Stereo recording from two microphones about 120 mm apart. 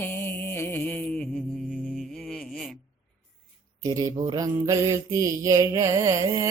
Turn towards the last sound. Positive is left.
turn(degrees=-25)  # may be behind; listen again after turning